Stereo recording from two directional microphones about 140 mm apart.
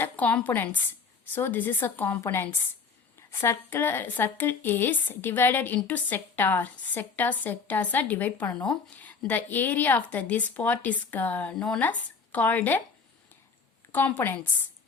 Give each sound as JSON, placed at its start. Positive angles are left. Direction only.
{"t": 0.0, "sound": "a woman's voice", "side_deg": 10}
{"t": 13.9, "sound": "a woman's voice", "side_deg": 15}